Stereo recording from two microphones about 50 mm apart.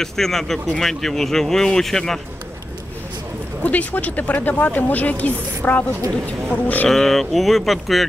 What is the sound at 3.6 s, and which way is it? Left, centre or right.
Speech, left.